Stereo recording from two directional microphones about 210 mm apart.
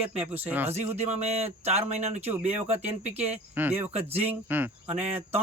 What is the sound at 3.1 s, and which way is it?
Speech, 10° right (ahead or behind).